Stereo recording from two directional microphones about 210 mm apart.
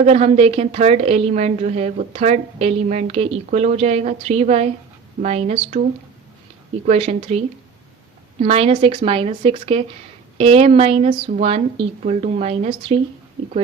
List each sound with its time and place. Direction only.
0.0 s a woman's voice: 30° right (ahead or behind)
6.8 s a woman's voice: 30° right (ahead or behind)